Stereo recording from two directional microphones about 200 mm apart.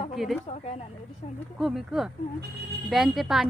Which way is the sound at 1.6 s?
Centre (ahead or behind).